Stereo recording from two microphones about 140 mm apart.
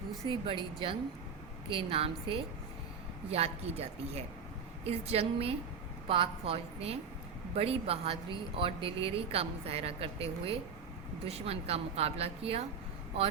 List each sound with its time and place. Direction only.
0.3 s a woman's voice: 40° right (ahead or behind)